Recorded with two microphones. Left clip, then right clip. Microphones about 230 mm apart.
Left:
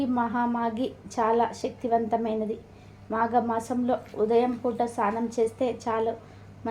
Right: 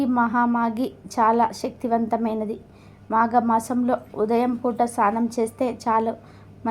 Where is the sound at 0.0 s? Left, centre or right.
Right.